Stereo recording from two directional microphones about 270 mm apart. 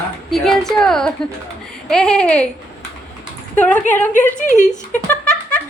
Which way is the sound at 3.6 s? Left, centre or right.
Centre.